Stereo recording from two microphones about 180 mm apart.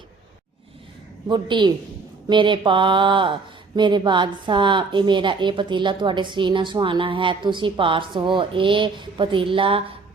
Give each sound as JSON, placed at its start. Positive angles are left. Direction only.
{"t": 1.3, "sound": "a woman's voice", "side_deg": -25}